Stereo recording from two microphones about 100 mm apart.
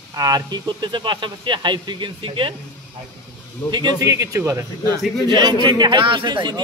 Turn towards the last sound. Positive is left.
turn(degrees=-50)  # may be behind; listen again after turning